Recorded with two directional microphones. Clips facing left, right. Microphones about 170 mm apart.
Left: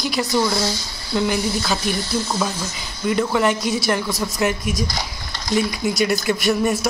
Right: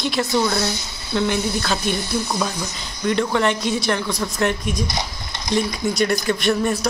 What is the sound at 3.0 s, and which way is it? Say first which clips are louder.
Speech: even; 5° left (ahead or behind).